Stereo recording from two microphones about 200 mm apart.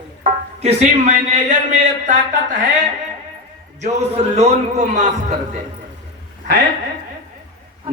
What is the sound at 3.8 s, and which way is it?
Speech, 35° right (ahead or behind).